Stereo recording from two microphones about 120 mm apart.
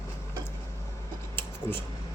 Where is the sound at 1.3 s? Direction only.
20° left (ahead or behind).